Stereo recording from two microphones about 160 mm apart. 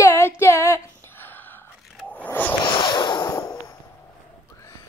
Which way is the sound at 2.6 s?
30° left (ahead or behind).